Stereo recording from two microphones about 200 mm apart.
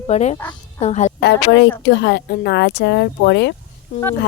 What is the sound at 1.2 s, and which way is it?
Speech, 55° left (ahead or behind).